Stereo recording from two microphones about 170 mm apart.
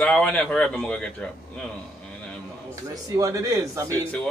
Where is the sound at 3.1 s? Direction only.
20° right (ahead or behind).